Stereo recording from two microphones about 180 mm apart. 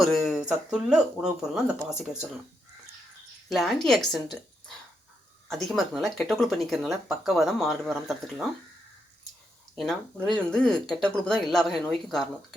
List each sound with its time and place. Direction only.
0.0 s speech: centre (ahead or behind)
3.5 s speech: centre (ahead or behind)
5.5 s speech: centre (ahead or behind)
10.2 s speech: 5° left (ahead or behind)